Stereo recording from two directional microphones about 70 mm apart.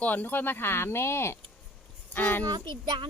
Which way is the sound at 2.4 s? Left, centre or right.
Right.